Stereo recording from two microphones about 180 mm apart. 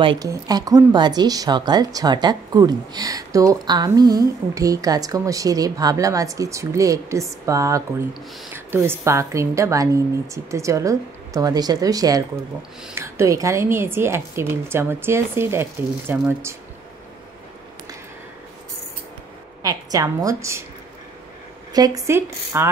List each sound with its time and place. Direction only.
0.0 s a woman's voice: 25° right (ahead or behind)
19.6 s speech: 20° right (ahead or behind)
21.7 s a woman's voice: 20° right (ahead or behind)